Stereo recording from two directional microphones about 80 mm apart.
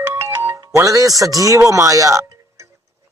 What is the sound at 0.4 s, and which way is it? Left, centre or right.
Speech, right.